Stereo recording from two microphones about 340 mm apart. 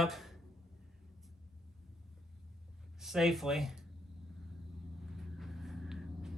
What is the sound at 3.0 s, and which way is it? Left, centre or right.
Speech, centre.